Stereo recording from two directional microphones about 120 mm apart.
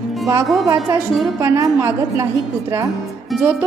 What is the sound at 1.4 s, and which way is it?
Speech, 25° right (ahead or behind).